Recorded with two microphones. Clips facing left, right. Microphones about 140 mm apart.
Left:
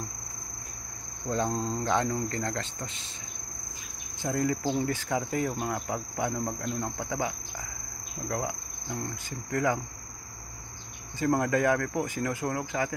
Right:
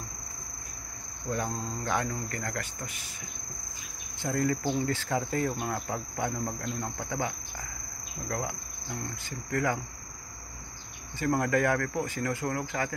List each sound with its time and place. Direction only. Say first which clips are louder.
1.3 s speech: left 4 dB; 25° left (ahead or behind)
4.2 s cricket: even; 15° left (ahead or behind)
8.3 s insect: left 2 dB; 20° left (ahead or behind)
9.5 s speech: left 2 dB; 20° left (ahead or behind)
11.1 s cricket: left 1 dB; 20° left (ahead or behind)